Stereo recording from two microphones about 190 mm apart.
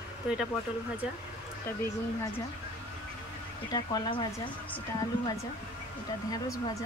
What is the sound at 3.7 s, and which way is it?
Speech, 25° left (ahead or behind).